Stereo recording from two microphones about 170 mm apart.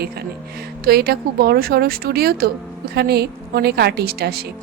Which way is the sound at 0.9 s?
65° right (ahead or behind).